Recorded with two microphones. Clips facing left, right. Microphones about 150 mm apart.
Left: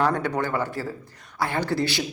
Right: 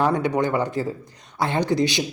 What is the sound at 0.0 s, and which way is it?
Speech, 15° right (ahead or behind).